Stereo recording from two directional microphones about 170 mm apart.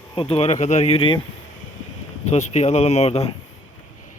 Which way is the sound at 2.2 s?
40° left (ahead or behind).